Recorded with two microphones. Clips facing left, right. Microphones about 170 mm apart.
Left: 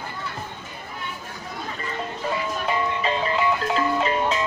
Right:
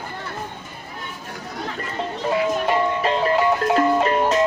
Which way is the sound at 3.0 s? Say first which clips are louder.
Right 4 dB; 55° right (ahead or behind).